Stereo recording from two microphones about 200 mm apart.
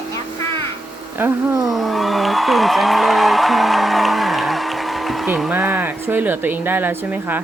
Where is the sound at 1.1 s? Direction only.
10° right (ahead or behind).